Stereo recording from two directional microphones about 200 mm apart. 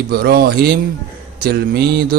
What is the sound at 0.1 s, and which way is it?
Mantra, 50° right (ahead or behind).